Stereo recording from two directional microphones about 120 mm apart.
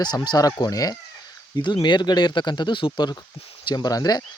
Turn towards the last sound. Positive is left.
turn(degrees=30)  # may be behind; listen again after turning